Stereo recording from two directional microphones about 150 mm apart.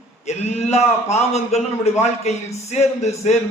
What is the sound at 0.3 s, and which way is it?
A man's voice, 45° left (ahead or behind).